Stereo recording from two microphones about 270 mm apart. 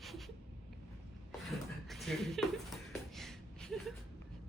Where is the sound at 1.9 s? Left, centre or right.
Centre.